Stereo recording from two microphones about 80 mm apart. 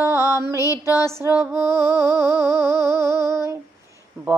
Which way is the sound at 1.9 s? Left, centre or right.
Left.